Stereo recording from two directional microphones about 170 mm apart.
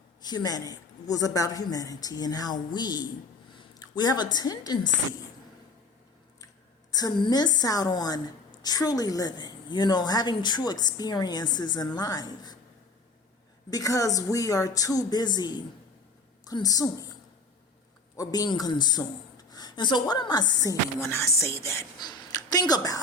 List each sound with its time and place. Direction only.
0.2 s a woman's voice: 25° left (ahead or behind)
6.9 s a woman's voice: 25° left (ahead or behind)
13.7 s a woman's voice: 20° left (ahead or behind)
18.2 s a man's voice: 20° left (ahead or behind)